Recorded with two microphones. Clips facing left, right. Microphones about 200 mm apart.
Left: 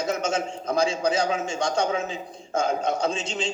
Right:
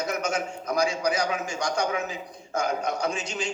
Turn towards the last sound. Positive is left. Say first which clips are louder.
# left 2 dB
turn(degrees=25)  # may be behind; listen again after turning